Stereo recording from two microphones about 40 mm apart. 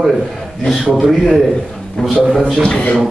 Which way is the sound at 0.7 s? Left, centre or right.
Centre.